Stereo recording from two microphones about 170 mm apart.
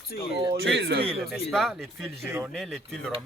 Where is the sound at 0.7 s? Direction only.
90° right.